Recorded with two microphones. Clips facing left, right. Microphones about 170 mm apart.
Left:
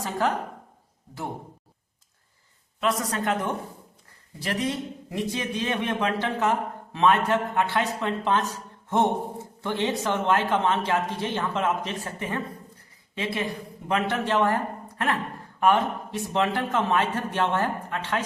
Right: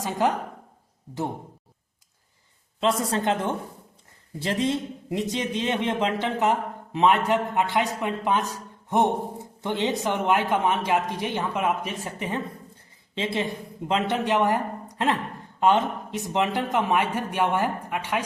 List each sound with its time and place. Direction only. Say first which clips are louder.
0.0 s speech: right 2 dB; 20° right (ahead or behind)
3.0 s a man's voice: right 2 dB; 25° right (ahead or behind)